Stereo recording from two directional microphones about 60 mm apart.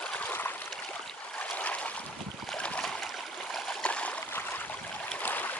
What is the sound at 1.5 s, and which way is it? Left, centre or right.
Boat, left.